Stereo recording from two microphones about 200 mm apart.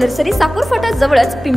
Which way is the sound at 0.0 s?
Centre (ahead or behind).